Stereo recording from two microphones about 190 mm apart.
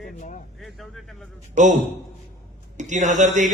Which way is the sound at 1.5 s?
40° right (ahead or behind).